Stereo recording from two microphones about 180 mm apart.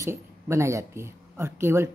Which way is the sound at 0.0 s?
15° right (ahead or behind).